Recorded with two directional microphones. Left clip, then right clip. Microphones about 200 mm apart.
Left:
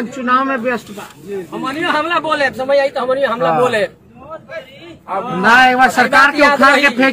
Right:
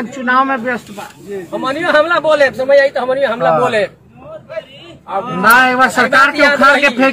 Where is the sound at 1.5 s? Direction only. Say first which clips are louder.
Right 4 dB; 10° left (ahead or behind).